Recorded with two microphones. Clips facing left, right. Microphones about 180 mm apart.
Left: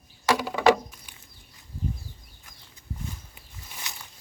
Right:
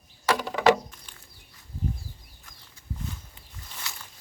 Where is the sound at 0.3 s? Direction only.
10° left (ahead or behind).